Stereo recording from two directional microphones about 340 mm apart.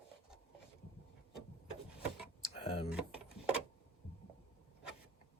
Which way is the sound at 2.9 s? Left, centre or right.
Centre.